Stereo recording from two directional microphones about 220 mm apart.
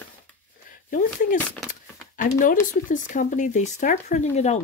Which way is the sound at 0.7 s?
40° left (ahead or behind).